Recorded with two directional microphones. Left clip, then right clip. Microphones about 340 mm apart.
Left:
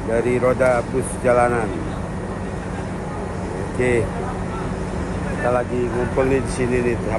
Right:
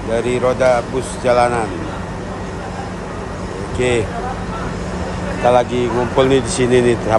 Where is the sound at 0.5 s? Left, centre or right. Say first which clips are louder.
Right 5 dB; centre.